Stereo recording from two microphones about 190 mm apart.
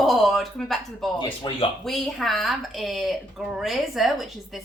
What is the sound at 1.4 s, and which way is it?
Speech, 25° left (ahead or behind).